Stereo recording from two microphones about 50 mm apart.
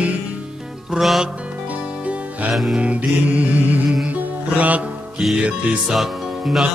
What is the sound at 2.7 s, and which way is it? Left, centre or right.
Music, right.